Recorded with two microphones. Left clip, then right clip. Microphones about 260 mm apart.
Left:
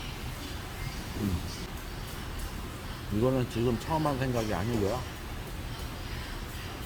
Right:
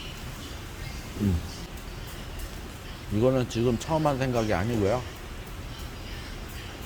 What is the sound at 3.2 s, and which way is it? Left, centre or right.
Speech, right.